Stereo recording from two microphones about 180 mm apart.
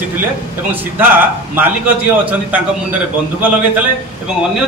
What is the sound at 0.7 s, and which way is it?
Speech, 10° right (ahead or behind).